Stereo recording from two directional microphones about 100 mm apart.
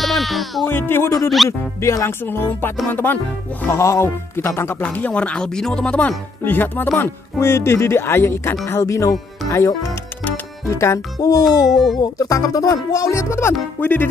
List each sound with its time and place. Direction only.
0.0 s music: centre (ahead or behind)
0.7 s speech: 20° left (ahead or behind)
1.4 s speech: centre (ahead or behind)
1.8 s speech: 30° left (ahead or behind)
4.8 s speech: 15° left (ahead or behind); by 11.4 s 40° left (ahead or behind)
11.7 s speech: centre (ahead or behind)
12.0 s speech: 35° left (ahead or behind); by 14.0 s 20° left (ahead or behind)